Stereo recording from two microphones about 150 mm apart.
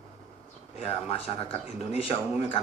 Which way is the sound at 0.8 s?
40° left (ahead or behind).